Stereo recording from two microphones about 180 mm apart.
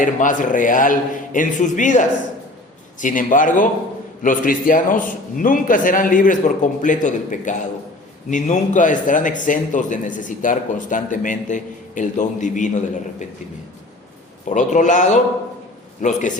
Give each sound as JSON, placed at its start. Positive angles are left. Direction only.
{"t": 0.0, "sound": "a man's voice", "side_deg": 45}
{"t": 14.5, "sound": "a man's voice", "side_deg": 45}